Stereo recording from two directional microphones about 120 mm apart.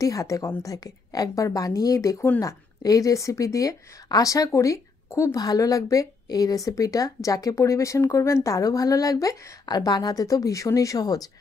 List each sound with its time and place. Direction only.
0.0 s speech: 25° left (ahead or behind)